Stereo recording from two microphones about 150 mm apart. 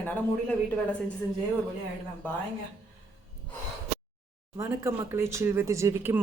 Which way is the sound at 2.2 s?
10° left (ahead or behind).